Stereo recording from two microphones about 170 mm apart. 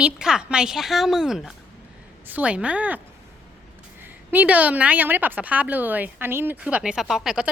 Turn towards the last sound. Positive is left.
turn(degrees=-5)  # may be behind; listen again after turning